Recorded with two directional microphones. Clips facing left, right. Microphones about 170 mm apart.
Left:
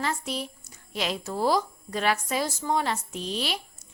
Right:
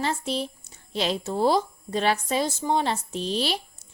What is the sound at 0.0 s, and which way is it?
Speech, 30° right (ahead or behind).